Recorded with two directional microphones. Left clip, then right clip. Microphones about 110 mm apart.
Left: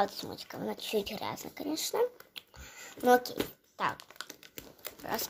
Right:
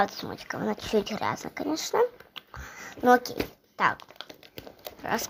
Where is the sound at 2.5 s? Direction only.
15° right (ahead or behind).